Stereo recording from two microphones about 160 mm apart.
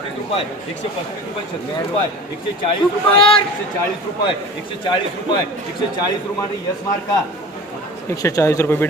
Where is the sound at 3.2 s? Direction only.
35° left (ahead or behind).